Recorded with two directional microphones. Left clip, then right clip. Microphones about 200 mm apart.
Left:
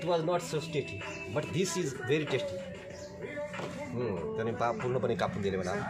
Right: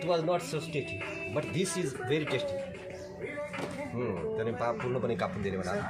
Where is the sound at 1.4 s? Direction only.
5° left (ahead or behind).